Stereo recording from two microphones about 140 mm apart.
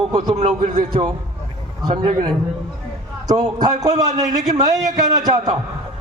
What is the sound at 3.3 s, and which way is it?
A man's voice, 25° right (ahead or behind).